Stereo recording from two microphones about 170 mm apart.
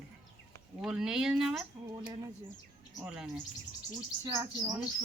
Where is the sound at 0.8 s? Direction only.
5° right (ahead or behind).